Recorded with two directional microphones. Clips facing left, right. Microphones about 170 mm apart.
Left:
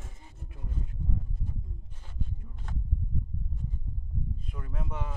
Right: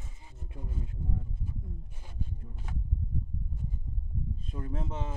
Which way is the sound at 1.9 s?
10° right (ahead or behind).